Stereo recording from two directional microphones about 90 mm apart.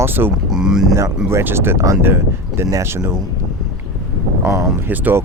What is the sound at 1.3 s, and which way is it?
Speech, 25° right (ahead or behind).